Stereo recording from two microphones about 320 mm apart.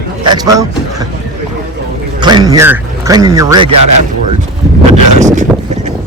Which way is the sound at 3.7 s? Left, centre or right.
Right.